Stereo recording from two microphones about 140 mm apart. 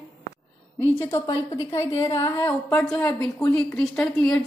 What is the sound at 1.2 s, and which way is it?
A woman's voice, 30° left (ahead or behind).